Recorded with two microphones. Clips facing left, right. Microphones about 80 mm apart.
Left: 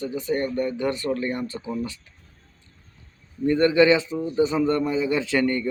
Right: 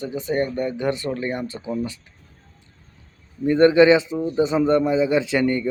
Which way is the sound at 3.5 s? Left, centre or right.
Right.